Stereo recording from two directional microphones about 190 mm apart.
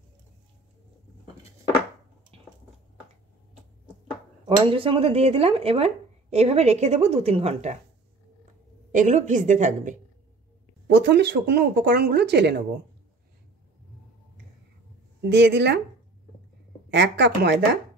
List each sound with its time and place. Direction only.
2.3 s squish: 30° right (ahead or behind)
4.5 s speech: 30° right (ahead or behind)
8.9 s speech: 40° right (ahead or behind)
10.9 s speech: 70° right (ahead or behind)
15.2 s speech: 65° right (ahead or behind)
16.9 s speech: 65° right (ahead or behind)